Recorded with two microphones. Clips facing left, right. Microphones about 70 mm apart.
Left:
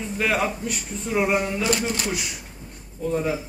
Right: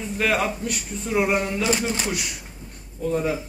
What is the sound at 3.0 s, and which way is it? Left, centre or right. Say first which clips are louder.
Speech: right 1 dB; centre.